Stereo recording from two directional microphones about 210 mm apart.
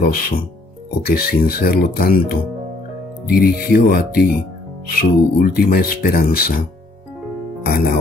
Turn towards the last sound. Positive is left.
turn(degrees=45)  # may be behind; listen again after turning